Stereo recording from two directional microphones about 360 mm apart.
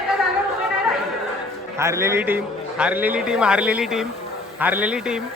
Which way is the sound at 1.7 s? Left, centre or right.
Centre.